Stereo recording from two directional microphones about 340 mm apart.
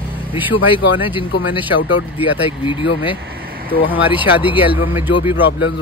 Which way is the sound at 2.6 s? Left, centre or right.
Centre.